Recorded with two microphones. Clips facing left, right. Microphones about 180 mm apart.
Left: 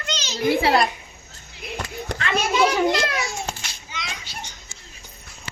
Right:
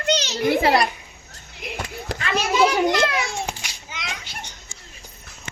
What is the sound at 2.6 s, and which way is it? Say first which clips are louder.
Children playing: right 2 dB; 20° right (ahead or behind).